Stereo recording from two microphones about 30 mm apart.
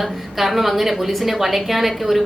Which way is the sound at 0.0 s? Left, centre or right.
Centre.